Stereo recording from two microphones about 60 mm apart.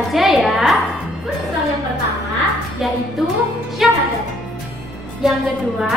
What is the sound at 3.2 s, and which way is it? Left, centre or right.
Speech, centre.